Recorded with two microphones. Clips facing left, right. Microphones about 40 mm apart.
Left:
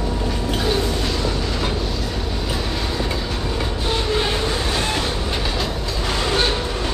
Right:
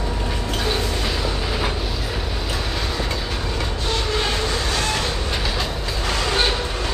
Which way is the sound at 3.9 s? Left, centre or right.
Centre.